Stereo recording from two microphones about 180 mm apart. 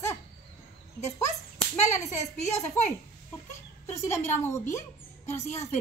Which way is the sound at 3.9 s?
15° left (ahead or behind).